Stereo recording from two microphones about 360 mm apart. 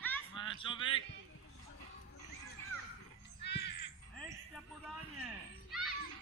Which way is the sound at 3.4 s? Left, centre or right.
Left.